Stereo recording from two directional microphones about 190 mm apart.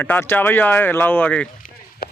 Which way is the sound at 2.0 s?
55° left (ahead or behind).